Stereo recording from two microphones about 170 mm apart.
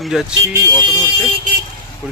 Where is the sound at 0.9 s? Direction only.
25° left (ahead or behind).